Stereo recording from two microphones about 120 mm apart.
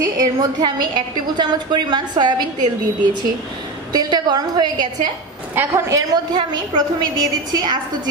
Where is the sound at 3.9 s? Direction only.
35° right (ahead or behind).